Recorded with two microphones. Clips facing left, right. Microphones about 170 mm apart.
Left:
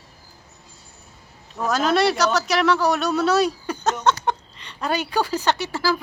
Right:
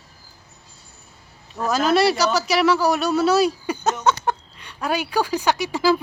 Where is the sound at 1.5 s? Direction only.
Centre (ahead or behind).